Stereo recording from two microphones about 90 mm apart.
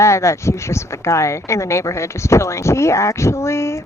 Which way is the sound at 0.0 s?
30° left (ahead or behind).